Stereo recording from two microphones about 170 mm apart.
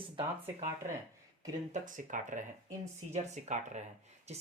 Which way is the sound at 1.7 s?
50° right (ahead or behind).